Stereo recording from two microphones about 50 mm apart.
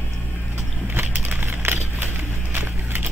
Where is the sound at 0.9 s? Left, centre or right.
Right.